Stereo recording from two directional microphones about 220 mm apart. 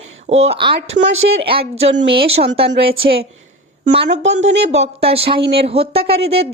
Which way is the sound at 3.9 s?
50° right (ahead or behind).